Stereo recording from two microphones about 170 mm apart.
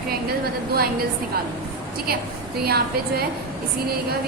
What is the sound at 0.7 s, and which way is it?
Speech, 60° right (ahead or behind).